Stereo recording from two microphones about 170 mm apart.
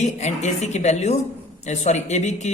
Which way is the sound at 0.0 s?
40° left (ahead or behind).